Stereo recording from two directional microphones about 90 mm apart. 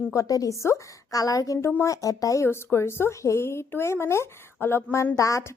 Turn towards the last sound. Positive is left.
turn(degrees=35)  # may be behind; listen again after turning